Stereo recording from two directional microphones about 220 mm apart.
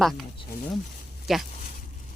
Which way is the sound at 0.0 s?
Centre (ahead or behind).